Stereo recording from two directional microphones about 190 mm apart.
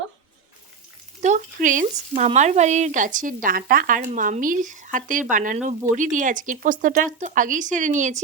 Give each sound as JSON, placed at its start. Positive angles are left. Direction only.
{"t": 1.2, "sound": "speech", "side_deg": -40}